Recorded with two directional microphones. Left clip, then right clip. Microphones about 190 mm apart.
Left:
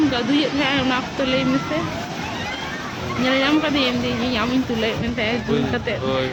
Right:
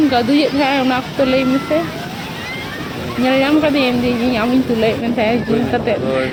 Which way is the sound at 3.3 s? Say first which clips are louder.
Right 5 dB; 25° right (ahead or behind).